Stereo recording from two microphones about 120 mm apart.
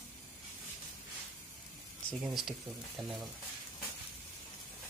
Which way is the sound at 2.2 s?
5° right (ahead or behind).